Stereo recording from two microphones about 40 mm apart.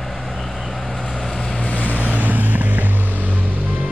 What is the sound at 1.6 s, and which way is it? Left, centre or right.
Vehicle, left.